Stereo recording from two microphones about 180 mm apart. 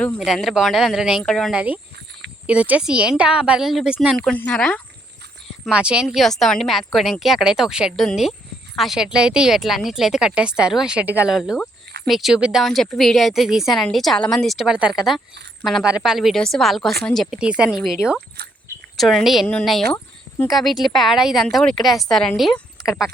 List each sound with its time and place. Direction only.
0.3 s speech: centre (ahead or behind)
5.6 s speech: 5° right (ahead or behind)
18.4 s speech: 65° right (ahead or behind)
18.9 s speech: centre (ahead or behind)